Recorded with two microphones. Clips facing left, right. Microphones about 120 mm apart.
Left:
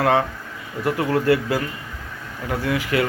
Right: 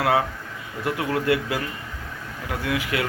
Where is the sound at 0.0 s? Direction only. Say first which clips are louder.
Left 3 dB; 10° right (ahead or behind).